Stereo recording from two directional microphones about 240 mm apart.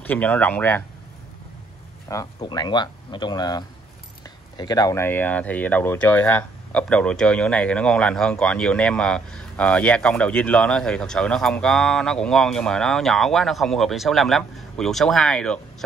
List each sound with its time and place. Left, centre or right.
0.0 s speech: centre
2.0 s speech: centre